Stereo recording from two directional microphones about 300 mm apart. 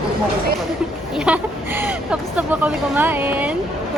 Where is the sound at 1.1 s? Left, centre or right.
Centre.